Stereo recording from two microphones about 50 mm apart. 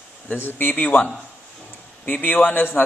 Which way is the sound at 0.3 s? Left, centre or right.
Left.